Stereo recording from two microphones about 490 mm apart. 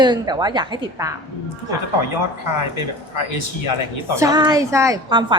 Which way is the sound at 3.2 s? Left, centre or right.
Left.